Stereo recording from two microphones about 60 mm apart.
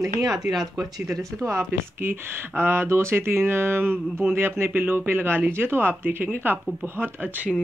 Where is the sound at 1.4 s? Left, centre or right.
Right.